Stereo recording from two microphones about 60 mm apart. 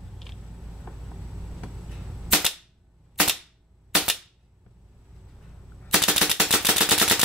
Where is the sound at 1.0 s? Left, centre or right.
Centre.